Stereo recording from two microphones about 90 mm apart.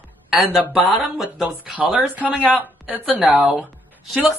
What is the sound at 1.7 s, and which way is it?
Speech, 15° right (ahead or behind).